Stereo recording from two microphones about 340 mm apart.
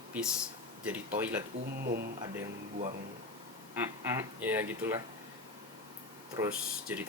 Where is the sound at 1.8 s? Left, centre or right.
Right.